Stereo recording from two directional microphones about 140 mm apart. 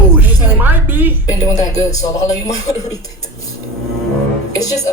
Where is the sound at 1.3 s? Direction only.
25° left (ahead or behind).